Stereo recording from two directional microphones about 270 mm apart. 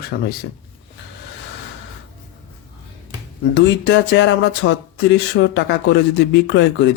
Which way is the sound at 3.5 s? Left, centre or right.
Left.